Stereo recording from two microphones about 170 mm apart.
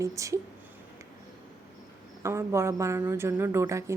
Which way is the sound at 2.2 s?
15° right (ahead or behind).